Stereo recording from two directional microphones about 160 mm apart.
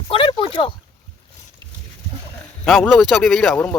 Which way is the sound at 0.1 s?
30° left (ahead or behind).